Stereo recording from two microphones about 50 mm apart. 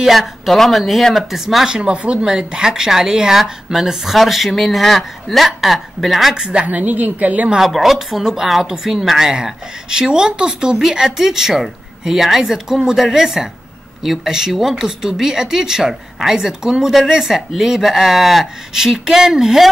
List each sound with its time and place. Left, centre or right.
0.0 s speech: centre
1.8 s speech: right; by 6.3 s centre
6.3 s a woman's voice: centre
6.7 s a woman's voice: right
7.5 s speech: centre